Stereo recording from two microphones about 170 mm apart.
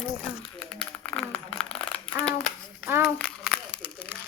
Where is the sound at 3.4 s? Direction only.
5° right (ahead or behind).